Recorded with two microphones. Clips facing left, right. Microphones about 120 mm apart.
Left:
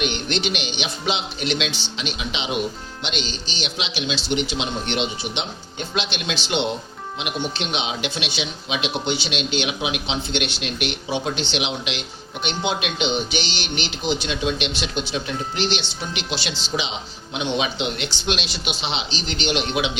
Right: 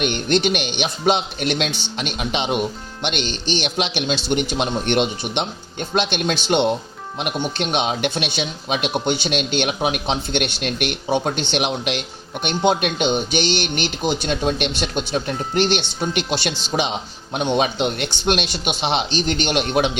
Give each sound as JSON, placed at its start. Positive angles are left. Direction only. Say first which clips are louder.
{"t": 0.0, "sound": "speech", "louder": "right 5 dB", "side_deg": -50}